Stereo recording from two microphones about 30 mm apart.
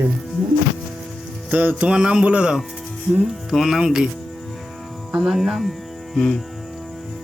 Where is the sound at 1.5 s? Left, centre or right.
Right.